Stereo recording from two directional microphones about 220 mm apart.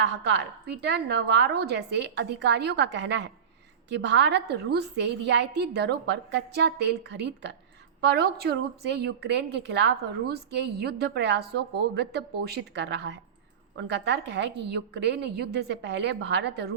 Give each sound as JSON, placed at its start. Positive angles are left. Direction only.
{"t": 0.0, "sound": "a woman's voice", "side_deg": -50}